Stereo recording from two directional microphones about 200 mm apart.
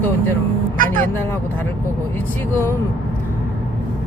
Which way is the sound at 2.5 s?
10° left (ahead or behind).